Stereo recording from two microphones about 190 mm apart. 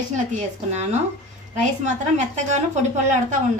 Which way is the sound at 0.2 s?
35° right (ahead or behind).